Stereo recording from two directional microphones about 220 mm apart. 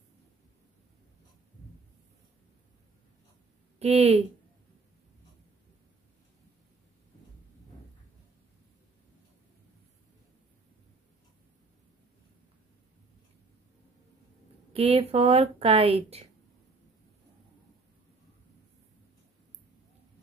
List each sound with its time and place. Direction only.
3.8 s speech: 25° right (ahead or behind)
14.7 s speech: 25° right (ahead or behind)